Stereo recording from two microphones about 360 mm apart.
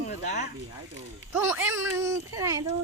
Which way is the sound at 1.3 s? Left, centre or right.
Centre.